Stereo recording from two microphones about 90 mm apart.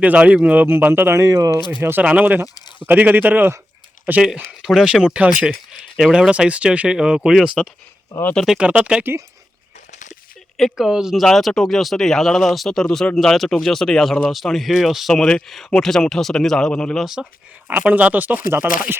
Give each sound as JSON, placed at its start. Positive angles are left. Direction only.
{"t": 0.0, "sound": "speech", "side_deg": -15}
{"t": 1.8, "sound": "speech", "side_deg": -25}
{"t": 2.6, "sound": "a sound", "side_deg": 55}
{"t": 2.8, "sound": "speech", "side_deg": -20}
{"t": 4.6, "sound": "speech", "side_deg": -5}
{"t": 5.5, "sound": "speech", "side_deg": -5}
{"t": 10.6, "sound": "speech", "side_deg": -5}
{"t": 17.7, "sound": "speech", "side_deg": -15}